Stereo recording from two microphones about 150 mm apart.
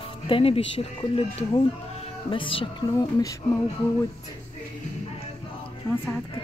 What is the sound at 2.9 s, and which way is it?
Speech, 25° left (ahead or behind).